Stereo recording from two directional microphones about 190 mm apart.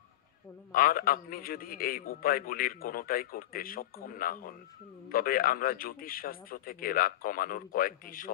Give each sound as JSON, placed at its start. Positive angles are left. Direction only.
{"t": 0.7, "sound": "a man's voice", "side_deg": 50}